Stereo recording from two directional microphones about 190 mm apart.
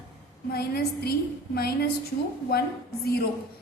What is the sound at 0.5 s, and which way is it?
Speech, 55° left (ahead or behind).